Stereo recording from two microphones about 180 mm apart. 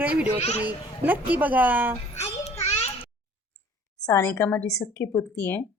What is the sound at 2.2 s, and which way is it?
Child singing, 35° left (ahead or behind).